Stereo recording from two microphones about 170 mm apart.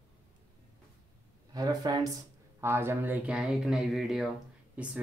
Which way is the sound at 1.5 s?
20° right (ahead or behind).